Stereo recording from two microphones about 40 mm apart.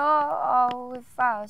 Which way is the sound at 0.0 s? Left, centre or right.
Centre.